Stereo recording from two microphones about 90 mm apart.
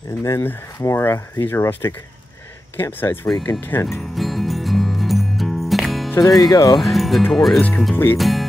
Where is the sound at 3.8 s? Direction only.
Centre (ahead or behind).